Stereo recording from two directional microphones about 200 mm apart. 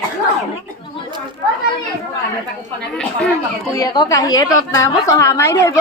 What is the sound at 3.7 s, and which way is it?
A woman's voice, 20° left (ahead or behind).